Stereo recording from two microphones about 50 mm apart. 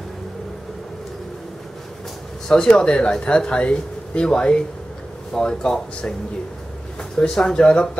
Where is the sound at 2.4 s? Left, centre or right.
Centre.